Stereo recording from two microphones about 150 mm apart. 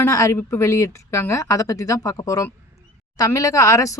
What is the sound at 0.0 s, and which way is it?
Speech, 20° left (ahead or behind).